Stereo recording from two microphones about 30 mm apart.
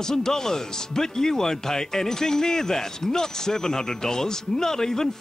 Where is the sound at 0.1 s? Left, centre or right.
Centre.